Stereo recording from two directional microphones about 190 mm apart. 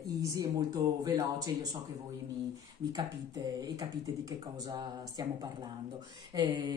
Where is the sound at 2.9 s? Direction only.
20° right (ahead or behind).